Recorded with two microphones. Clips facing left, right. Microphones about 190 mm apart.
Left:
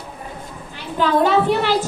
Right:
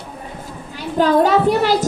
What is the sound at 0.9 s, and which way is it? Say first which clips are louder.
Speech: right 2 dB; 40° right (ahead or behind).